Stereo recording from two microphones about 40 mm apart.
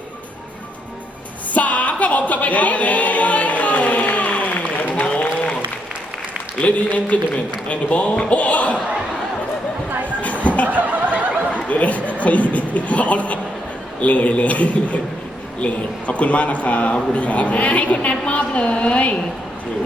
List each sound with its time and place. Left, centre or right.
1.5 s a capella: left
6.6 s a man's voice: left
10.2 s a sound: left
10.7 s snicker: right
11.5 s a sound: left
14.0 s a man's voice: left